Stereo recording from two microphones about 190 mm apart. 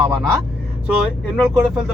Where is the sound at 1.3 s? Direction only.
5° left (ahead or behind).